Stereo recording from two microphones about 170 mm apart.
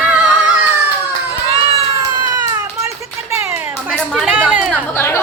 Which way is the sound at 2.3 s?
20° right (ahead or behind).